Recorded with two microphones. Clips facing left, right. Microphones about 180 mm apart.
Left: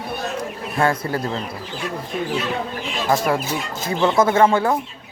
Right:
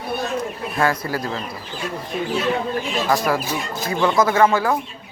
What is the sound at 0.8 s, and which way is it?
Speech, 25° left (ahead or behind).